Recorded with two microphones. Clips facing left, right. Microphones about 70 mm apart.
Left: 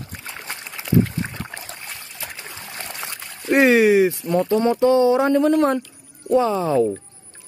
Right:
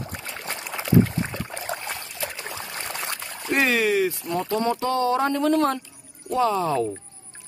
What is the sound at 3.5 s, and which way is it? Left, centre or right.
Speech, left.